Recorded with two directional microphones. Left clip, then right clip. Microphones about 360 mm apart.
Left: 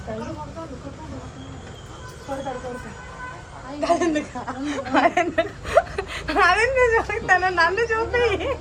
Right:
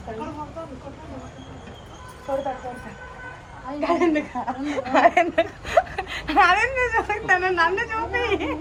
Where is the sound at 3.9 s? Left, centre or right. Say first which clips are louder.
Even; right.